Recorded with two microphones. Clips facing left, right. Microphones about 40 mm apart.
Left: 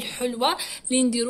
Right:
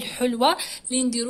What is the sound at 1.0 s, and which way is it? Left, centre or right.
Speech, centre.